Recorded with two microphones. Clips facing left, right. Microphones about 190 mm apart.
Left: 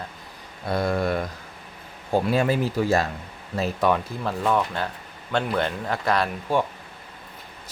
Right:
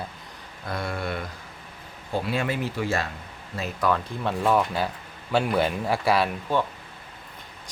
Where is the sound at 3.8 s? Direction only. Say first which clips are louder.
Left 2 dB; 20° left (ahead or behind).